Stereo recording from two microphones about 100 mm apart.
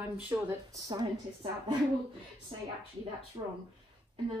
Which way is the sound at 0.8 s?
45° right (ahead or behind).